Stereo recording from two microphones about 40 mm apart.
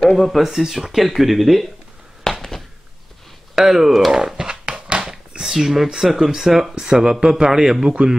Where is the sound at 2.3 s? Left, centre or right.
Centre.